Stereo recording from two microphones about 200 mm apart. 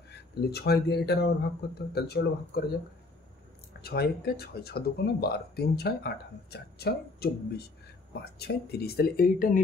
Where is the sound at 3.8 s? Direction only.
50° left (ahead or behind).